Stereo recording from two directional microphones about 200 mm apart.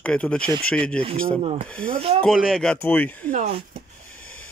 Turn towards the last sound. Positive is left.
turn(degrees=-35)  # may be behind; listen again after turning